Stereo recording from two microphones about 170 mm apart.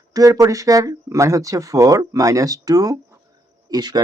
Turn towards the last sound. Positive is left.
turn(degrees=-25)  # may be behind; listen again after turning